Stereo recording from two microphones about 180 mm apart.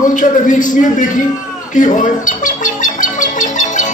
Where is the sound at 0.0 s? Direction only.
45° left (ahead or behind).